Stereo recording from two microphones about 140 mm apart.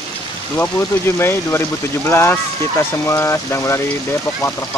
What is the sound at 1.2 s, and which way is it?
Speech, 15° left (ahead or behind).